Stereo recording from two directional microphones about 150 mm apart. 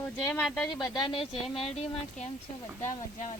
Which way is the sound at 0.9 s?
35° left (ahead or behind).